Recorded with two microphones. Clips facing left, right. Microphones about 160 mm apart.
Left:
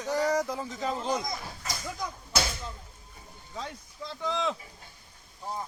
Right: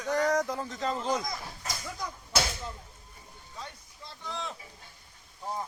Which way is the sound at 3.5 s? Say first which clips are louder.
Left 6 dB; 90° left.